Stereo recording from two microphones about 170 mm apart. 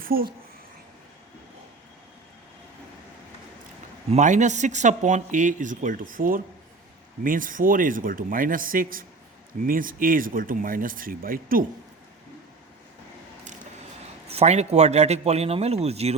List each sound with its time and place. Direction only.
0.0 s a woman's voice: 60° right (ahead or behind)
4.1 s speech: 45° right (ahead or behind)
14.3 s speech: 40° right (ahead or behind)